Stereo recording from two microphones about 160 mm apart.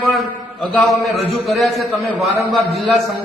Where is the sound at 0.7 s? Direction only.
Centre (ahead or behind).